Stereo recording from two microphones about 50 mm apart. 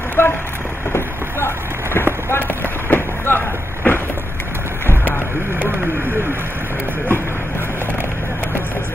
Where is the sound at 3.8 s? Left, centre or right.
Left.